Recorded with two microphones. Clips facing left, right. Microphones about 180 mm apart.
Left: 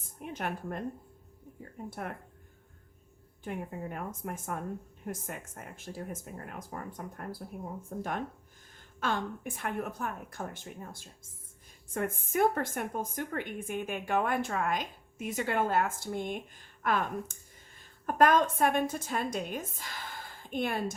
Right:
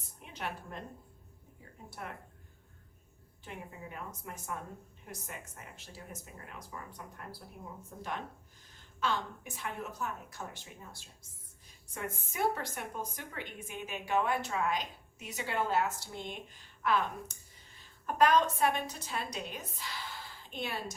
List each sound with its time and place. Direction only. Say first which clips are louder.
0.2 s a woman's voice: left 5 dB; 50° left (ahead or behind)
1.9 s a woman's voice: left 5 dB; 50° left (ahead or behind)
3.4 s a woman's voice: left 8 dB; 55° left (ahead or behind)